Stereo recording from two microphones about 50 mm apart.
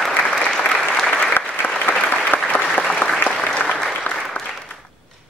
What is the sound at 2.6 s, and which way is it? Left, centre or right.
Applause, centre.